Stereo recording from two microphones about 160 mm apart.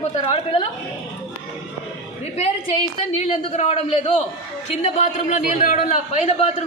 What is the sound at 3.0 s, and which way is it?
A man's voice, 45° left (ahead or behind).